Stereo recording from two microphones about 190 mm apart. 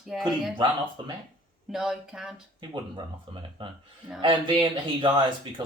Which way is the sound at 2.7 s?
25° right (ahead or behind).